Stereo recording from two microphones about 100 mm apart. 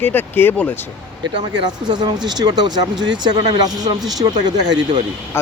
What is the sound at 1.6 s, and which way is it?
Speech, 45° right (ahead or behind).